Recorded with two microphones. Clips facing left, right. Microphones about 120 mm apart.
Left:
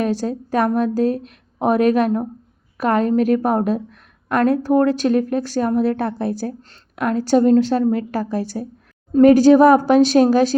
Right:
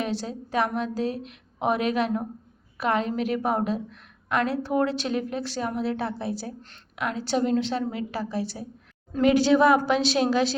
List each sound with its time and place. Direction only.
0.0 s a woman's voice: 45° left (ahead or behind)